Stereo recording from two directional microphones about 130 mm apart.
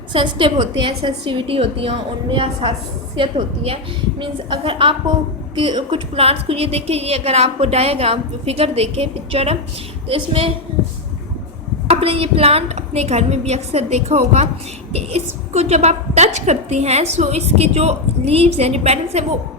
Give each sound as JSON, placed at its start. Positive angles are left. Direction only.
{"t": 0.1, "sound": "a woman's voice", "side_deg": -40}
{"t": 11.9, "sound": "a woman's voice", "side_deg": -50}